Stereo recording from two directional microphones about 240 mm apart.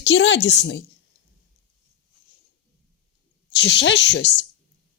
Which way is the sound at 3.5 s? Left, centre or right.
Left.